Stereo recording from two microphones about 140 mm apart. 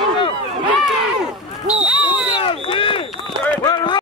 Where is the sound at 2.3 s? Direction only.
40° left (ahead or behind).